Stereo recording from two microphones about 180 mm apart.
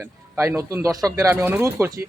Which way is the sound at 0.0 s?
15° right (ahead or behind).